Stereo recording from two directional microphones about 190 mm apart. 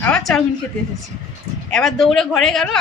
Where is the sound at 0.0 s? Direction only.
5° left (ahead or behind).